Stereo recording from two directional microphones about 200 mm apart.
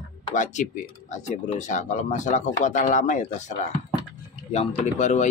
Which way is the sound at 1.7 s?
35° left (ahead or behind).